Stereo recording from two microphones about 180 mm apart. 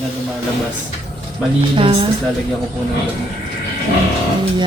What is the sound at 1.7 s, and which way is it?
Speech, 30° right (ahead or behind).